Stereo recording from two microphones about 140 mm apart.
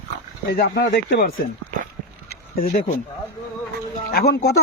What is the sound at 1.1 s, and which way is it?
Speech, 90° left.